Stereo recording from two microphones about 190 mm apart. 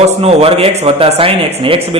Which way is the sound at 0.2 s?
30° right (ahead or behind).